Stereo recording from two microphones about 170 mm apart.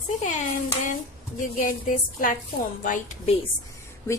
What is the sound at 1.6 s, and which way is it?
A woman's voice, 50° left (ahead or behind).